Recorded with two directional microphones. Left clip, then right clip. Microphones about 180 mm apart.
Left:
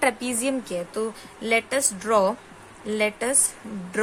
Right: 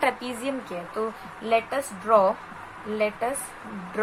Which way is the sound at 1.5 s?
90° left.